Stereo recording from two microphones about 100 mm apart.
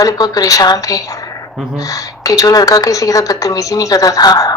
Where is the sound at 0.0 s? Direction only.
35° left (ahead or behind).